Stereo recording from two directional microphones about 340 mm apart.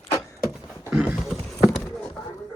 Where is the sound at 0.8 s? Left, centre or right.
Centre.